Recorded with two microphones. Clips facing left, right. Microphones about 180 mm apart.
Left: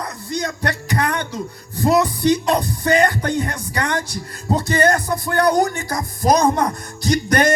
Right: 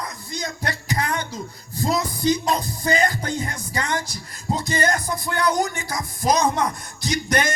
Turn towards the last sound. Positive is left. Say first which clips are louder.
# left 6 dB
turn(degrees=60)  # may be behind; listen again after turning